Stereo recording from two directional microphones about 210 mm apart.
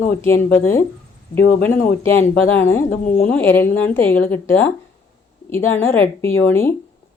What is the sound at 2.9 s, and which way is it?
Speech, 40° left (ahead or behind).